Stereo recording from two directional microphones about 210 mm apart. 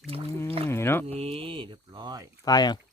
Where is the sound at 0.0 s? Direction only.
25° right (ahead or behind).